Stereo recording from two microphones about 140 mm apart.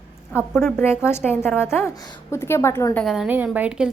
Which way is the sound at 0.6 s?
15° left (ahead or behind).